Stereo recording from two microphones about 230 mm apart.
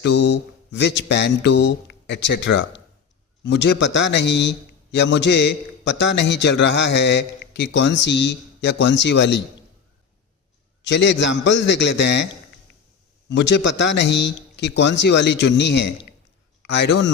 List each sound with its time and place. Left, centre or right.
0.0 s a man's voice: left
10.8 s a man's voice: left
13.3 s a man's voice: left